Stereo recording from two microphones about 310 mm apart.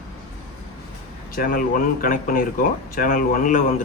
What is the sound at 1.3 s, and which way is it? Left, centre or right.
Speech, left.